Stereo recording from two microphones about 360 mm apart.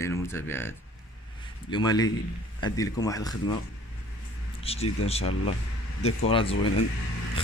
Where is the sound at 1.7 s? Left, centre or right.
Centre.